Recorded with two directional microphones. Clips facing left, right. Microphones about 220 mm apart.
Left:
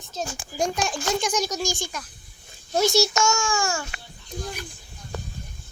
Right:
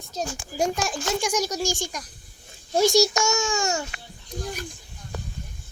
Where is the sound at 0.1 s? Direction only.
35° right (ahead or behind).